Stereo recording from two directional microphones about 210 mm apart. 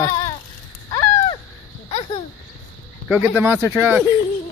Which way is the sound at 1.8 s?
30° left (ahead or behind).